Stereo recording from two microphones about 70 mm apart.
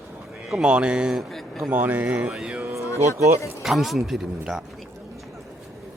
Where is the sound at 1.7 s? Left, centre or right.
Right.